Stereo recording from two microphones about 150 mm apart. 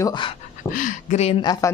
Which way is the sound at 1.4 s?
25° left (ahead or behind).